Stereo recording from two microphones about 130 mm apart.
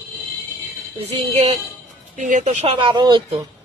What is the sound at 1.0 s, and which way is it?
Speech, 55° right (ahead or behind).